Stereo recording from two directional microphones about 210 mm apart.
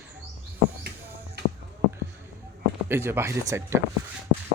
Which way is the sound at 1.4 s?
50° right (ahead or behind).